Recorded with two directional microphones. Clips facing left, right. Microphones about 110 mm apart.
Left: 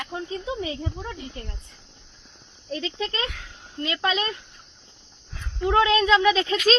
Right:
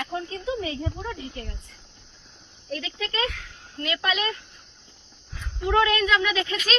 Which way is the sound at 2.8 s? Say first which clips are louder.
Even; 30° left (ahead or behind).